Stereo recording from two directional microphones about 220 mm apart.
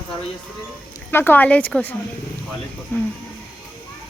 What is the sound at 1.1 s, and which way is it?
Speech, 10° left (ahead or behind).